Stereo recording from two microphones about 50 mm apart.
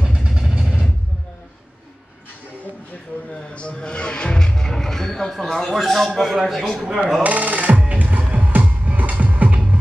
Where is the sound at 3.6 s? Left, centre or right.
Centre.